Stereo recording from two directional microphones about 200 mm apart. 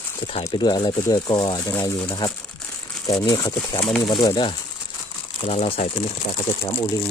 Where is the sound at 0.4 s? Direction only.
20° left (ahead or behind).